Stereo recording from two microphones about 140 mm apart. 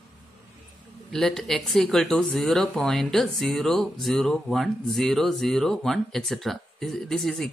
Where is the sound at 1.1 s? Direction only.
5° left (ahead or behind).